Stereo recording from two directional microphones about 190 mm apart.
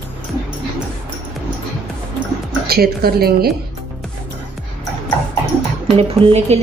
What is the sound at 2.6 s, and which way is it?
Speech, 55° right (ahead or behind).